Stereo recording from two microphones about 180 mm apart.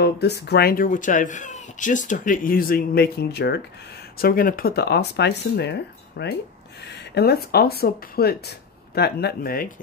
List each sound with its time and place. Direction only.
0.0 s speech: 65° left (ahead or behind)
4.2 s speech: 55° left (ahead or behind)